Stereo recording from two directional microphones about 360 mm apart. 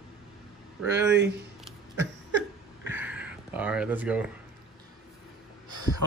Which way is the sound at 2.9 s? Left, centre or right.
Centre.